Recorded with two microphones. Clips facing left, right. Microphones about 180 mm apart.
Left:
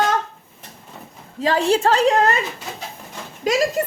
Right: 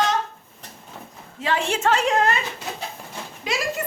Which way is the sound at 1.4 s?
35° left (ahead or behind).